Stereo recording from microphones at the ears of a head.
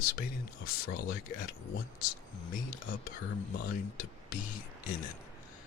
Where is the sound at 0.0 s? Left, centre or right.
Left.